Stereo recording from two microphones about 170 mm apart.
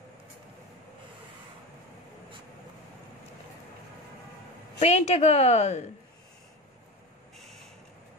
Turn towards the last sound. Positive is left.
turn(degrees=0)  # may be behind; listen again after turning